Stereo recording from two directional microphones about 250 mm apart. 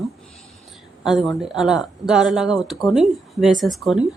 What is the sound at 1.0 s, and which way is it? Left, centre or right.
A woman's voice, centre.